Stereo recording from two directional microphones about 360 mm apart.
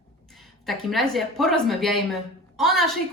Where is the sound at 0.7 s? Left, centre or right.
Centre.